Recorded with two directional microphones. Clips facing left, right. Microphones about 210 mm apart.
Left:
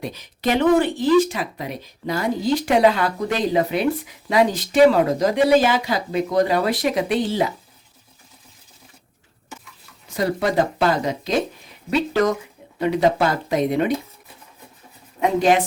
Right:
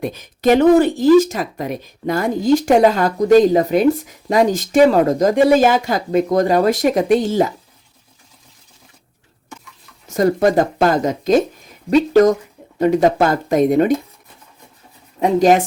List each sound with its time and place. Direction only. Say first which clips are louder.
0.0 s speech: right 7 dB; 50° right (ahead or behind)
10.2 s speech: right 6 dB; 45° right (ahead or behind)
15.2 s speech: right 4 dB; 40° right (ahead or behind)